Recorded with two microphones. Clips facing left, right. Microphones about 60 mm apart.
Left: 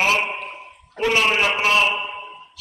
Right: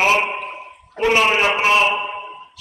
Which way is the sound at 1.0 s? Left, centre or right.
Centre.